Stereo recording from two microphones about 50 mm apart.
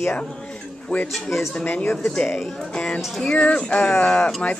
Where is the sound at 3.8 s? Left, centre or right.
Centre.